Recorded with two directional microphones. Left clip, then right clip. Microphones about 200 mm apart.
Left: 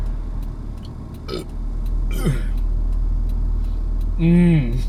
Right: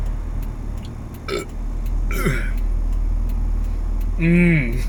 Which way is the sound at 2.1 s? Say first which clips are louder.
Right 4 dB; 10° left (ahead or behind).